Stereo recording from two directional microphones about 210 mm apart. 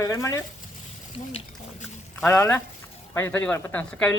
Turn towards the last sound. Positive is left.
turn(degrees=5)  # may be behind; listen again after turning